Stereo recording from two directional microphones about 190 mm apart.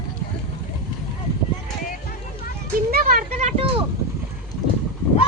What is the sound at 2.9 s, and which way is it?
Speech, 55° right (ahead or behind).